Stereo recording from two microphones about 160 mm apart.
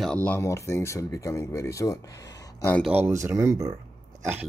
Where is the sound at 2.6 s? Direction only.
10° left (ahead or behind).